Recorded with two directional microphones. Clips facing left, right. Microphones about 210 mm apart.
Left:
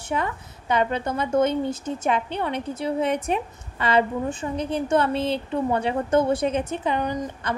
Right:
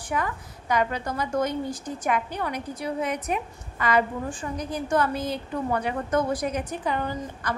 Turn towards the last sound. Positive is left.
turn(degrees=20)  # may be behind; listen again after turning